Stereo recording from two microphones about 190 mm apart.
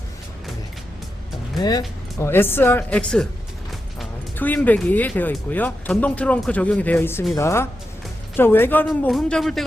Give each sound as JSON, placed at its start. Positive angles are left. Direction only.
{"t": 1.5, "sound": "speech", "side_deg": 20}
{"t": 4.4, "sound": "speech", "side_deg": 10}